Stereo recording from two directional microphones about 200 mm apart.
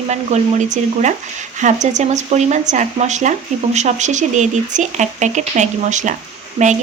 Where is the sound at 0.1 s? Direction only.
35° right (ahead or behind).